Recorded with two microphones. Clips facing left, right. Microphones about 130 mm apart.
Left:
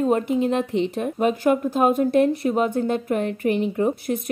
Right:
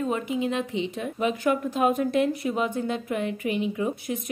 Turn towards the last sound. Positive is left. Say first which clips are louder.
# left 6 dB
turn(degrees=45)  # may be behind; listen again after turning